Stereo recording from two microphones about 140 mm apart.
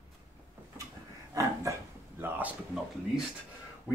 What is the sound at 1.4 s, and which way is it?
Speech, 25° right (ahead or behind).